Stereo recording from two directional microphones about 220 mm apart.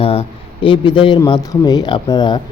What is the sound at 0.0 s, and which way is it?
A man's voice, 25° left (ahead or behind).